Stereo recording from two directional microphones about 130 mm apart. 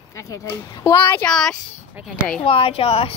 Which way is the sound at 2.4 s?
45° left (ahead or behind).